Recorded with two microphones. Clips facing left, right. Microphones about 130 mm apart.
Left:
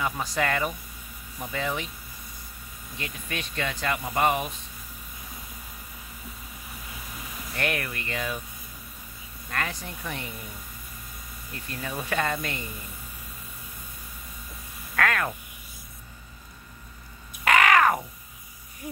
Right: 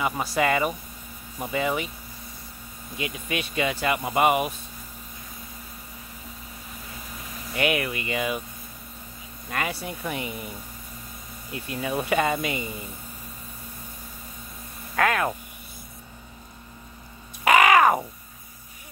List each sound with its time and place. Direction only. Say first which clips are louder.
0.0 s speech: right 3 dB; 5° right (ahead or behind)
3.0 s speech: right 5 dB; 10° right (ahead or behind)
7.5 s speech: right 5 dB; 5° right (ahead or behind)
9.5 s speech: right 3 dB; 10° right (ahead or behind)
11.5 s speech: right 6 dB; 10° right (ahead or behind)
15.0 s speech: right 3 dB; 15° right (ahead or behind)
17.5 s crow: right 3 dB; 15° right (ahead or behind)